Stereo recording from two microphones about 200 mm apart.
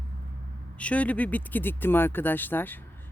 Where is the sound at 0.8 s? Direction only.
5° left (ahead or behind).